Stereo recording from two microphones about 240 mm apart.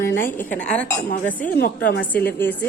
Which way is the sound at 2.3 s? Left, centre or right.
Centre.